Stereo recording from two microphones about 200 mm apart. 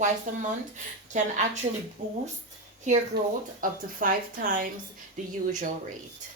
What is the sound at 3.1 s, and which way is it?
Speech, 55° right (ahead or behind).